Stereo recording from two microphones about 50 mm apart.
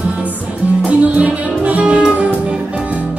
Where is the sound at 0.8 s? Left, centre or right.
Right.